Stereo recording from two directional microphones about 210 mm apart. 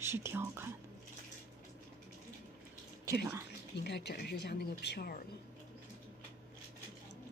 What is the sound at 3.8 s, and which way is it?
Speech, 50° left (ahead or behind).